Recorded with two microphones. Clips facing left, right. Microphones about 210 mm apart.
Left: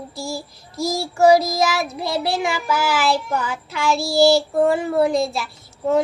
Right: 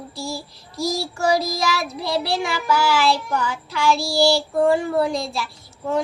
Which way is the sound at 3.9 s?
55° left (ahead or behind).